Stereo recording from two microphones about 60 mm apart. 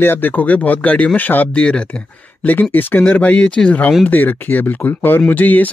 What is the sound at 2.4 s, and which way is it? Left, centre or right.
Speech, left.